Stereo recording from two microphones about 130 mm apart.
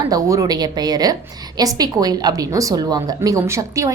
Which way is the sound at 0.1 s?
25° right (ahead or behind).